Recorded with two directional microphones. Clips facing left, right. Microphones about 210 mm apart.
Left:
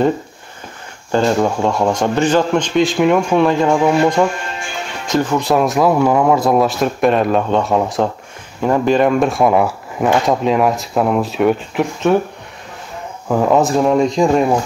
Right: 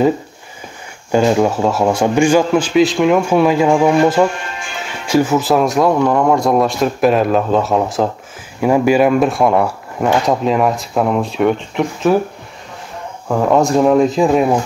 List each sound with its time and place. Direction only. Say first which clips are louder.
1.1 s a man's voice: right 2 dB; 10° right (ahead or behind)
5.0 s speech: right 3 dB; 10° right (ahead or behind)
13.3 s speech: even; centre (ahead or behind)